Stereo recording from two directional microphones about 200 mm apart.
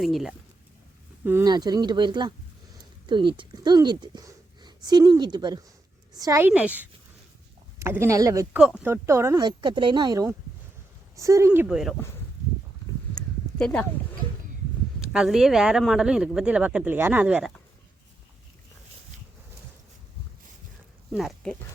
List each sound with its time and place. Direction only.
0.0 s speech: centre (ahead or behind)
1.2 s speech: 10° right (ahead or behind)
13.1 s a sound: 5° left (ahead or behind)
15.0 s speech: 5° right (ahead or behind)
21.1 s speech: centre (ahead or behind)